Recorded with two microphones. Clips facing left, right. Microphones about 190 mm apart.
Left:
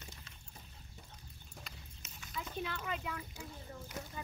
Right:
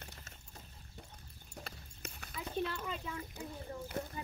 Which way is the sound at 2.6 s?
5° left (ahead or behind).